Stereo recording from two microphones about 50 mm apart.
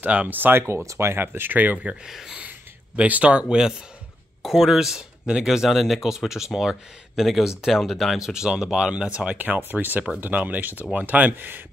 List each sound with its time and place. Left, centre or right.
0.0 s speech: right
2.0 s speech: centre
3.0 s speech: right
3.4 s speech: centre
4.4 s speech: centre
8.2 s speech: centre
9.6 s speech: right